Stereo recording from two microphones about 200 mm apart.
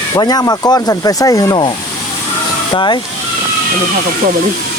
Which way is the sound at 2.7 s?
25° left (ahead or behind).